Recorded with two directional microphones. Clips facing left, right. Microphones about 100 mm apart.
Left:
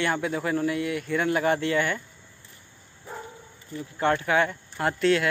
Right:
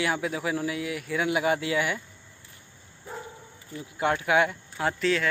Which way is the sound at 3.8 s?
10° right (ahead or behind).